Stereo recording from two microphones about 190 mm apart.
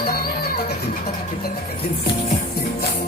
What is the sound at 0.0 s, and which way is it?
Music, 55° left (ahead or behind).